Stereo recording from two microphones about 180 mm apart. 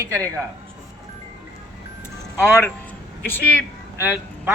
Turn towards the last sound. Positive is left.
turn(degrees=-10)  # may be behind; listen again after turning